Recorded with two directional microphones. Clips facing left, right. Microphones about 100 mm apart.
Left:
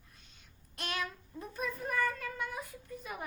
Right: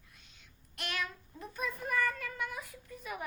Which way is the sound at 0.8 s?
35° left (ahead or behind).